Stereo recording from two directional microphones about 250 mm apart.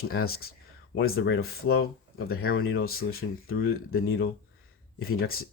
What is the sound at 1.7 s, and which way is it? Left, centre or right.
Speech, left.